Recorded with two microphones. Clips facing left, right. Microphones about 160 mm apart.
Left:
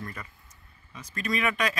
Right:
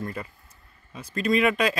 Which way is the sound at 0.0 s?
30° right (ahead or behind).